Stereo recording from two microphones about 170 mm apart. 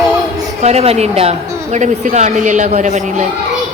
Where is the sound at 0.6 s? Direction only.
40° right (ahead or behind).